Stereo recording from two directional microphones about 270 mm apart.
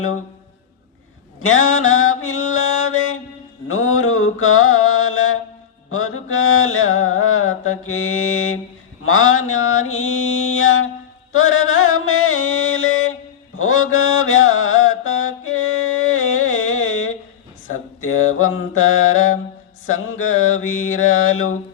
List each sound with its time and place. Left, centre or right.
1.4 s mantra: left
11.3 s music: left
13.6 s mantra: left